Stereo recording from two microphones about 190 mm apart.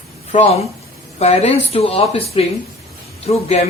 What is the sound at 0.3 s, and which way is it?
Speech, 35° left (ahead or behind).